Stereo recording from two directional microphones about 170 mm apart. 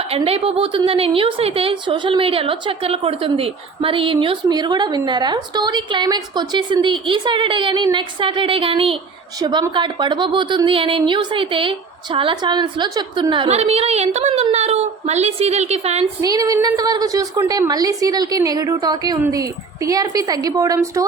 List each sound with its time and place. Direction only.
0.1 s a woman's voice: 35° right (ahead or behind)
16.2 s a woman's voice: 20° right (ahead or behind)